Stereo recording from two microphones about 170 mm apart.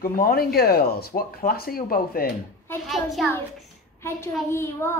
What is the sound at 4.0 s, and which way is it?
A child's voice, 15° left (ahead or behind).